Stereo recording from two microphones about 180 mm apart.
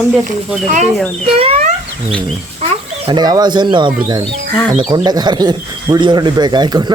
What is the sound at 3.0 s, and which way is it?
Speech, 20° right (ahead or behind).